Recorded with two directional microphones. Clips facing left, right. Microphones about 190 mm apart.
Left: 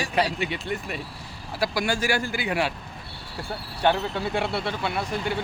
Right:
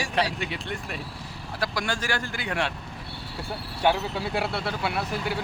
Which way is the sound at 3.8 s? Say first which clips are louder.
Left 1 dB; 5° right (ahead or behind).